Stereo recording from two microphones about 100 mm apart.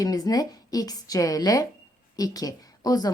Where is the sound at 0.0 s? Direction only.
40° left (ahead or behind).